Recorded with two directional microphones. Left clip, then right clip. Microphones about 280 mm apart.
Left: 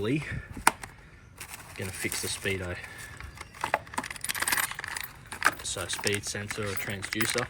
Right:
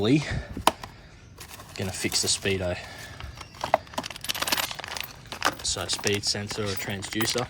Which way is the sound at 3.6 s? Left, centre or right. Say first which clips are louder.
Right 4 dB; centre.